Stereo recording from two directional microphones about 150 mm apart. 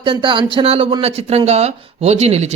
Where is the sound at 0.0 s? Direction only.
35° right (ahead or behind).